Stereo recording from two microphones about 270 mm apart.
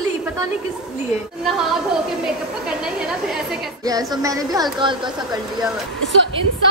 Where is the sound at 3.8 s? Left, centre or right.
Centre.